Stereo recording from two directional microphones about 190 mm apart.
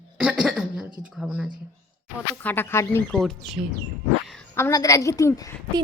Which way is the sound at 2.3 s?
10° left (ahead or behind).